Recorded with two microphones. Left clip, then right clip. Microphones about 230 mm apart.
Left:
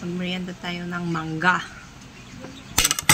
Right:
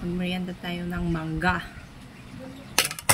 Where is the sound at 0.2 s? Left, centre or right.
Centre.